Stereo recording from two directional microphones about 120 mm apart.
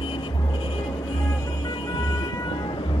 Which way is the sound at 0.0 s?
40° left (ahead or behind).